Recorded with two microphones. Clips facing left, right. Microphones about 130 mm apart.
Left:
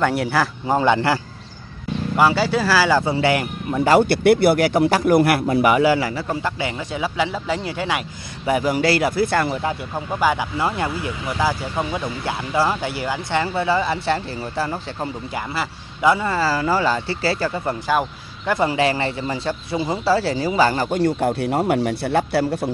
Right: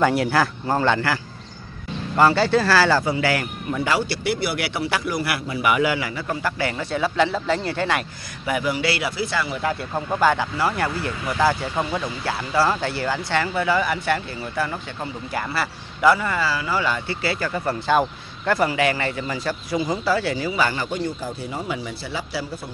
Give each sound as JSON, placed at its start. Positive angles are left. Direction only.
{"t": 0.0, "sound": "speech", "side_deg": 0}
{"t": 0.7, "sound": "speech", "side_deg": 15}
{"t": 2.1, "sound": "speech", "side_deg": 5}
{"t": 3.0, "sound": "speech", "side_deg": 25}
{"t": 3.8, "sound": "speech", "side_deg": 50}
{"t": 8.5, "sound": "speech", "side_deg": 40}
{"t": 9.9, "sound": "speech", "side_deg": 5}
{"t": 15.3, "sound": "speech", "side_deg": 20}
{"t": 16.3, "sound": "speech", "side_deg": 40}
{"t": 17.8, "sound": "a sound", "side_deg": 5}
{"t": 18.5, "sound": "speech", "side_deg": 25}
{"t": 21.0, "sound": "a man's voice", "side_deg": 70}